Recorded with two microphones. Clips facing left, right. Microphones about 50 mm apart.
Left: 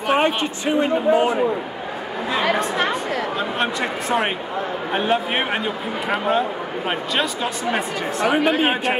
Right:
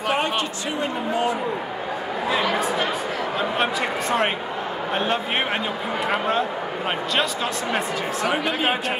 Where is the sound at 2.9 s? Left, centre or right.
Centre.